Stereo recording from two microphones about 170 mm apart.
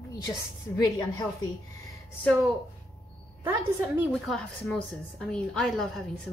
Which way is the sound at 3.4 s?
10° right (ahead or behind).